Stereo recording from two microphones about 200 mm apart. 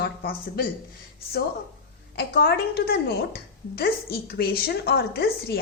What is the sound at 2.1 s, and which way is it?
A woman's voice, 50° left (ahead or behind).